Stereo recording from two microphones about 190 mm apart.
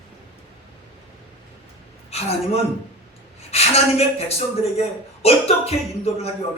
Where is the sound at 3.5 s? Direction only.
30° left (ahead or behind).